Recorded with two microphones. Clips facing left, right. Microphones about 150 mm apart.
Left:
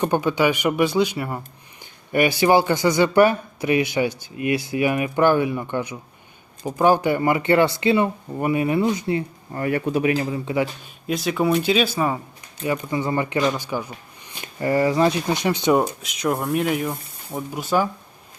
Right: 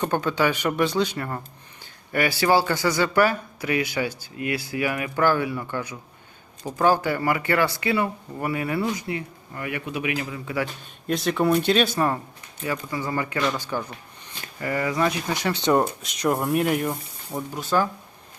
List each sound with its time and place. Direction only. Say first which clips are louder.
0.0 s speech: left 3 dB; 15° left (ahead or behind)
11.0 s speech: left 1 dB; centre (ahead or behind)
12.6 s speech: left 5 dB; 20° left (ahead or behind)
14.4 s speech: left 7 dB; 30° left (ahead or behind); by 15.8 s 15° left (ahead or behind)
16.0 s speech: even; centre (ahead or behind)
17.5 s speech: left 2 dB; 10° left (ahead or behind)